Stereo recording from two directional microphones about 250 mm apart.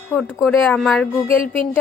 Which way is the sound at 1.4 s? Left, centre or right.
Left.